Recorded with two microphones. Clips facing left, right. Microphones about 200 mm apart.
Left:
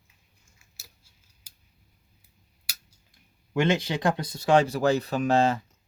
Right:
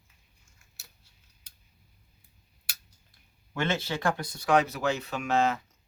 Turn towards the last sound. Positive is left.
turn(degrees=35)  # may be behind; listen again after turning